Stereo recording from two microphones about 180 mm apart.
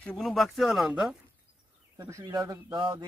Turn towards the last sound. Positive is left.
turn(degrees=-25)  # may be behind; listen again after turning